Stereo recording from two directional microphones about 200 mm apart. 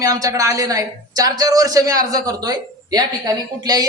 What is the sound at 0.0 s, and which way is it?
A man's voice, 15° right (ahead or behind).